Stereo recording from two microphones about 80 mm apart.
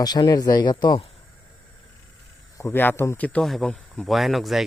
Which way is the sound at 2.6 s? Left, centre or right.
Left.